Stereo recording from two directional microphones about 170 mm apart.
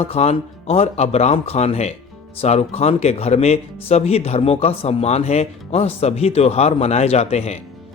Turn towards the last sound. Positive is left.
turn(degrees=40)  # may be behind; listen again after turning